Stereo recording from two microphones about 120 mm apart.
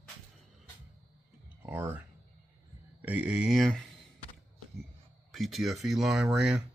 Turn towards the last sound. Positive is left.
turn(degrees=-5)  # may be behind; listen again after turning